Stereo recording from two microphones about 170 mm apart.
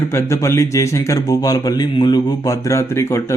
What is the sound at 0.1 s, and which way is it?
A man's voice, 15° left (ahead or behind).